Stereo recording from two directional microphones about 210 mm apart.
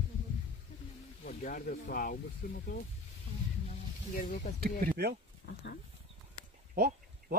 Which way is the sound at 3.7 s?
35° left (ahead or behind).